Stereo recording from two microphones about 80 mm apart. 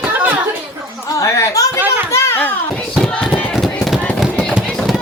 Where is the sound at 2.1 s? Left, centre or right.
Left.